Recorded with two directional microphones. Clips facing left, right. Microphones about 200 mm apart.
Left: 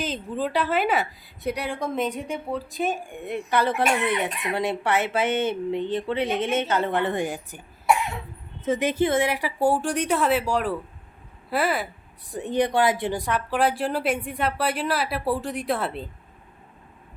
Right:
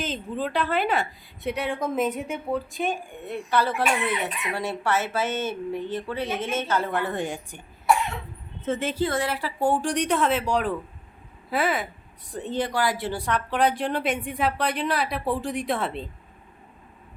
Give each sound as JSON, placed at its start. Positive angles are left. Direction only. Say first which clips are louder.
{"t": 0.0, "sound": "speech", "louder": "left 1 dB", "side_deg": 0}
{"t": 2.9, "sound": "a woman's voice", "louder": "left 2 dB", "side_deg": 10}
{"t": 7.3, "sound": "speech", "louder": "left 1 dB", "side_deg": 5}
{"t": 8.6, "sound": "a woman's voice", "louder": "left 3 dB", "side_deg": 15}
{"t": 12.3, "sound": "speech", "louder": "left 4 dB", "side_deg": 15}